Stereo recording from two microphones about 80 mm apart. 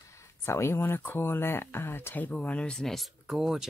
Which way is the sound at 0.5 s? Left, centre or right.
Left.